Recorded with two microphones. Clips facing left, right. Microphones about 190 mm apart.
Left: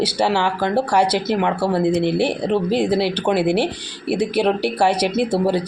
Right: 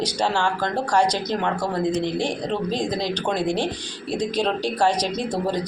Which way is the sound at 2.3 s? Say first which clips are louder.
Left 6 dB; 65° left (ahead or behind).